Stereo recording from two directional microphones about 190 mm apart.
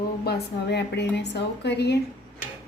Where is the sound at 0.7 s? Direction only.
65° left (ahead or behind).